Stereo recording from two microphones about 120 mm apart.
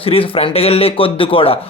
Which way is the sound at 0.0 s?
50° left (ahead or behind).